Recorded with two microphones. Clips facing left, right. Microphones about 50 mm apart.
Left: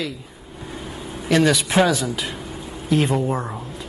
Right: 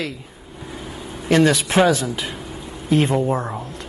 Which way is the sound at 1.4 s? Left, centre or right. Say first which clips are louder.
Right 1 dB; centre.